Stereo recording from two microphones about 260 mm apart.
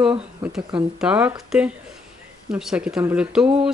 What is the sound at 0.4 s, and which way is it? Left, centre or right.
Speech, centre.